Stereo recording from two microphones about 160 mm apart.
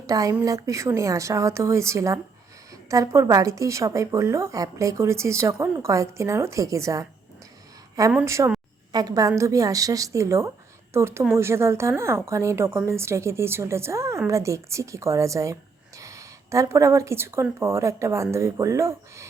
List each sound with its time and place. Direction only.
0.1 s a woman's voice: 20° right (ahead or behind)
8.1 s a woman's voice: 15° right (ahead or behind)